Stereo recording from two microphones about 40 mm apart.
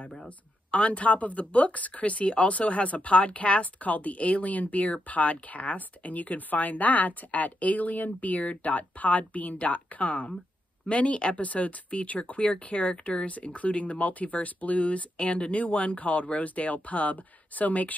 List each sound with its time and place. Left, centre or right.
0.7 s speech: left